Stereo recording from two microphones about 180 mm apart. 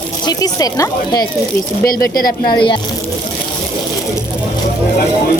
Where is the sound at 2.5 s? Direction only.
25° left (ahead or behind).